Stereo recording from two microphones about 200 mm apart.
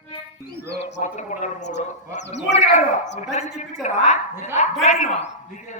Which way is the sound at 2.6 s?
35° left (ahead or behind).